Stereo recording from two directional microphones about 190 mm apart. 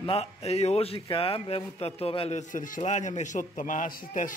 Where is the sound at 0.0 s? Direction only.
30° left (ahead or behind).